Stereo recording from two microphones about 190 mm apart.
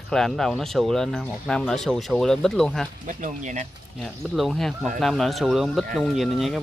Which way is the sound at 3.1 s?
40° right (ahead or behind).